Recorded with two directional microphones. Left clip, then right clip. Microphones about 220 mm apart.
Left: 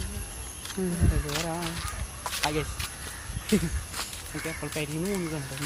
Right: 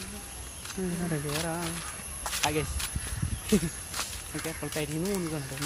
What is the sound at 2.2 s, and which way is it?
Snake, 10° right (ahead or behind).